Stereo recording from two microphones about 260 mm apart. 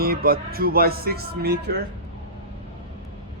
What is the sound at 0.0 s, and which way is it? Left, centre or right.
Speech, right.